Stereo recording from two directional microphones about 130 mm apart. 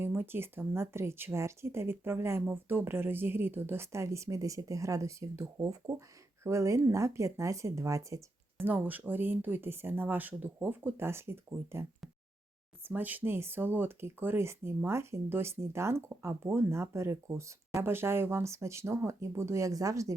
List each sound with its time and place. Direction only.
0.0 s speech: 15° right (ahead or behind)